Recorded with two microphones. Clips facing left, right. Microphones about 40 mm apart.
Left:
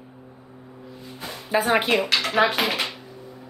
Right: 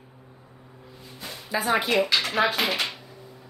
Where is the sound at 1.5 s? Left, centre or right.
Left.